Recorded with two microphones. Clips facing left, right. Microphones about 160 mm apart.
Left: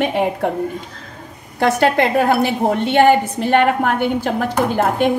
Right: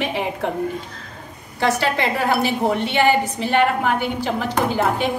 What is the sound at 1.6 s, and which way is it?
A woman's voice, 55° left (ahead or behind).